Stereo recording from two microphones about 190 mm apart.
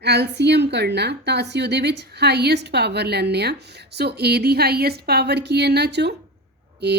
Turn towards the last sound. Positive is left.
turn(degrees=-60)  # may be behind; listen again after turning